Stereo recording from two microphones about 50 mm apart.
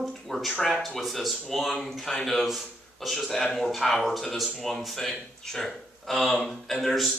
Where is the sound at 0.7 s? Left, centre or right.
Centre.